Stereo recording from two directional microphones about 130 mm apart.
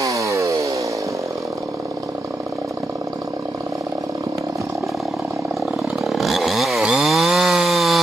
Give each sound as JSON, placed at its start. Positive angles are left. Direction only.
{"t": 0.0, "sound": "chainsaw", "side_deg": -25}
{"t": 5.9, "sound": "chainsaw", "side_deg": 0}